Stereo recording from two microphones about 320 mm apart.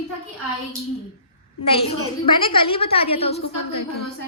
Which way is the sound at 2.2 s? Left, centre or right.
Centre.